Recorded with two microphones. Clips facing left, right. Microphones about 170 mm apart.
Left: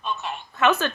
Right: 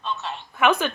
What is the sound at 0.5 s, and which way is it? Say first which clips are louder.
Speech: right 1 dB; 15° right (ahead or behind).